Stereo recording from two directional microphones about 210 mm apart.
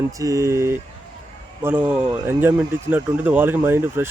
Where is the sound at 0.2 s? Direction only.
15° right (ahead or behind).